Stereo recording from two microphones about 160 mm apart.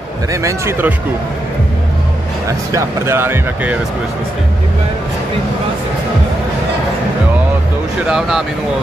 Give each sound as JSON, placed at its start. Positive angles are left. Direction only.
{"t": 0.3, "sound": "speech", "side_deg": -20}
{"t": 2.7, "sound": "speech", "side_deg": -15}
{"t": 8.1, "sound": "speech", "side_deg": 0}